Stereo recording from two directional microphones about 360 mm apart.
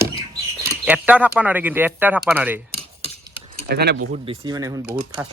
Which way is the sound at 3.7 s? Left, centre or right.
Right.